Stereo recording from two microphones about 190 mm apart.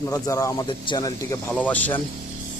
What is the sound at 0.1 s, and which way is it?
Speech, 15° left (ahead or behind).